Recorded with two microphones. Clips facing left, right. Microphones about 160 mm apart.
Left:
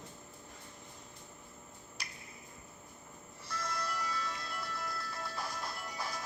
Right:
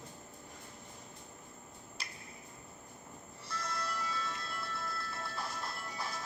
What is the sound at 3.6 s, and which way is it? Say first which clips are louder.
Music: left 1 dB; centre (ahead or behind).